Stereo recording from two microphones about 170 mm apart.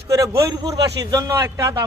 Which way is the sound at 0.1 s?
20° right (ahead or behind).